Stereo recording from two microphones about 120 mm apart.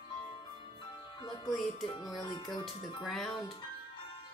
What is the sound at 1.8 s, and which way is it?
Speech, 40° left (ahead or behind).